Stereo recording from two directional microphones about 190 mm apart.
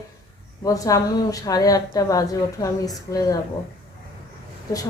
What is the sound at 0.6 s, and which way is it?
A woman's voice, 15° left (ahead or behind).